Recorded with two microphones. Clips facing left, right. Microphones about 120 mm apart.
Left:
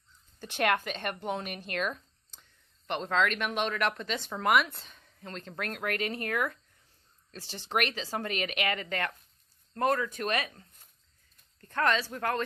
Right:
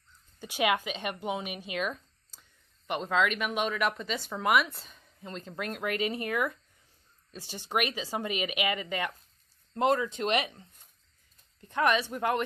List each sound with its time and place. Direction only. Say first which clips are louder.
0.4 s speech: even; 10° right (ahead or behind)
9.8 s speech: right 2 dB; 20° right (ahead or behind)